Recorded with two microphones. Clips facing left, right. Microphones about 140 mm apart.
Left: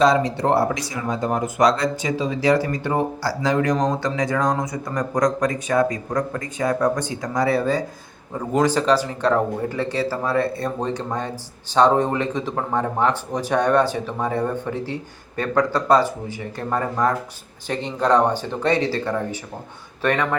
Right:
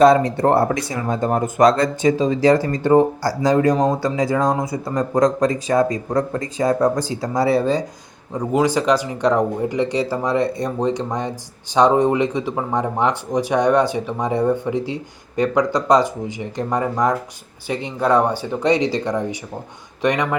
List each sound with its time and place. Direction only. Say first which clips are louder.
0.0 s speech: right 5 dB; 55° right (ahead or behind); by 7.9 s 25° right (ahead or behind)
8.3 s speech: right 2 dB; 10° right (ahead or behind)